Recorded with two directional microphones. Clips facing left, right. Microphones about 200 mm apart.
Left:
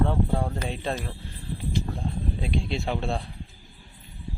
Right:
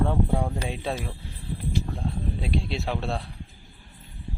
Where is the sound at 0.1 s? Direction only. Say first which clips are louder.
Right 1 dB; 10° right (ahead or behind).